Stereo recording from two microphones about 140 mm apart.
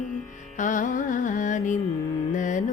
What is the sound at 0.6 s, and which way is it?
Carnatic music, 65° left (ahead or behind).